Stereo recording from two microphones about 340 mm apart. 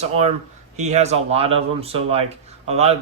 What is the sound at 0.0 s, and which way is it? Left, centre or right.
Speech, centre.